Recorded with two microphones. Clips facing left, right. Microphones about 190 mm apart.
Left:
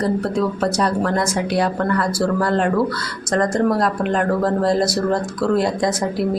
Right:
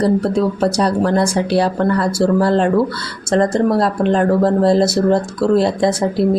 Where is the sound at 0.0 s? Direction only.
30° right (ahead or behind).